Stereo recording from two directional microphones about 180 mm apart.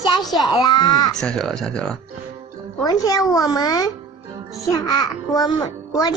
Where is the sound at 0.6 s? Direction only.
25° left (ahead or behind).